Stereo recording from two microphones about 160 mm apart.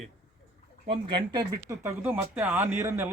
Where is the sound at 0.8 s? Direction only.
35° right (ahead or behind).